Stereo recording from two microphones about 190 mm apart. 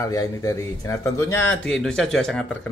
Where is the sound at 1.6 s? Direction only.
5° left (ahead or behind).